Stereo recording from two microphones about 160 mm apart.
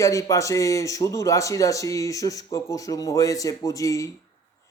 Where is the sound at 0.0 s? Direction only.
20° left (ahead or behind).